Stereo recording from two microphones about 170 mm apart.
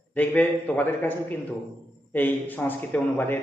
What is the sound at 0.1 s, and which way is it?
A man's voice, 10° left (ahead or behind).